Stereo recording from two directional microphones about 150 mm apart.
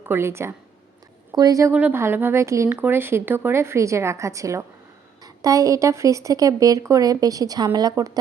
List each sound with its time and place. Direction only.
0.0 s a woman's voice: 15° right (ahead or behind)
1.7 s a woman's voice: 10° right (ahead or behind)